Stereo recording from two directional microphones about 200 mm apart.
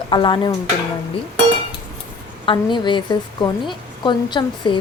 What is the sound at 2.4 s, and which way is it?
A woman's voice, 25° left (ahead or behind).